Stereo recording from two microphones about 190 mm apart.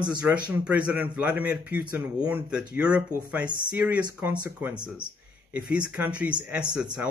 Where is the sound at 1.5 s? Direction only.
50° left (ahead or behind).